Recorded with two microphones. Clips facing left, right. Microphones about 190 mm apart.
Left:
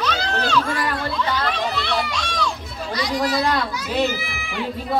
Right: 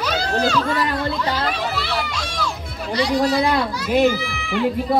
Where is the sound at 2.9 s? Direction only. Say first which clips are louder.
Right 4 dB; 30° right (ahead or behind).